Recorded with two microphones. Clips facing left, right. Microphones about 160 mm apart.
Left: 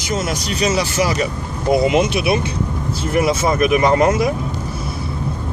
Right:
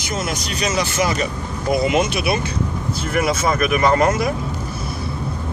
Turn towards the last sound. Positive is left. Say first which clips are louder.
# left 2 dB
turn(degrees=20)  # may be behind; listen again after turning